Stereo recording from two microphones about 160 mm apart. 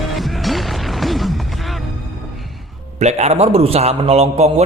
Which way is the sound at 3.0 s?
45° right (ahead or behind).